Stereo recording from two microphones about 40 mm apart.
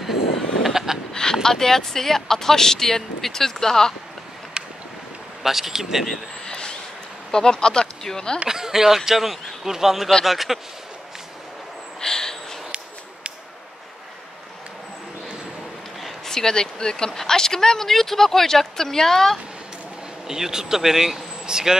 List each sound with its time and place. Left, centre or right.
0.0 s a sound: centre
1.1 s speech: centre
5.4 s speech: centre
6.4 s a sound: centre
7.2 s speech: centre
8.5 s speech: centre
12.0 s a sound: centre
16.0 s speech: centre
20.2 s speech: centre